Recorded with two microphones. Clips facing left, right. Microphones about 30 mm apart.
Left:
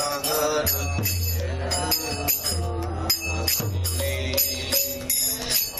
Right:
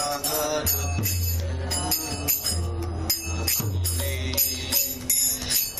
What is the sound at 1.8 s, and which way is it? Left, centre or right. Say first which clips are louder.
Music: left 3 dB; left.